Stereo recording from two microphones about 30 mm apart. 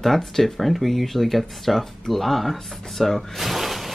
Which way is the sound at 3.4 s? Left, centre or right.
Centre.